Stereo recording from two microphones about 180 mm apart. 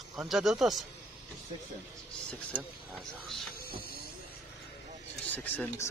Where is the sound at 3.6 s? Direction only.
55° left (ahead or behind).